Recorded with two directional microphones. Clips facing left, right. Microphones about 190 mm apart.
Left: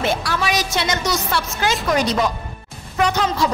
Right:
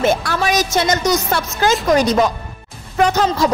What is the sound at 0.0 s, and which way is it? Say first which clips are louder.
A woman's voice: right 4 dB; 45° right (ahead or behind).